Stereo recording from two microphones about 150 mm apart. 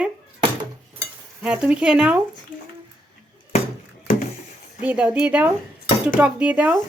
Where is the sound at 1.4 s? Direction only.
5° right (ahead or behind).